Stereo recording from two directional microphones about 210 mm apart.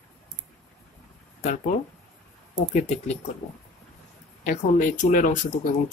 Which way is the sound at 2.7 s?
35° left (ahead or behind).